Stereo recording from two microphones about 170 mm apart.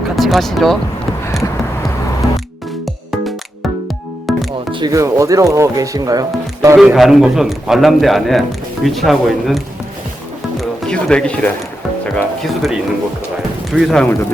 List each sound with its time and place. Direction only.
0.2 s speech: centre (ahead or behind)
4.3 s music: centre (ahead or behind)
4.7 s speech: 25° right (ahead or behind)
6.7 s a man's voice: centre (ahead or behind)
10.6 s a man's voice: 5° left (ahead or behind)